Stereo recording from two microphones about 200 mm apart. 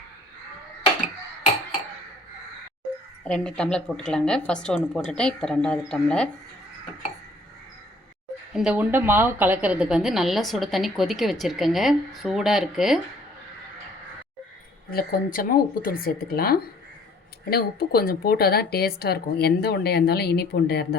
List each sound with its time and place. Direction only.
3.2 s a woman's voice: 5° left (ahead or behind)
8.5 s a woman's voice: 5° right (ahead or behind)
14.8 s speech: 45° left (ahead or behind)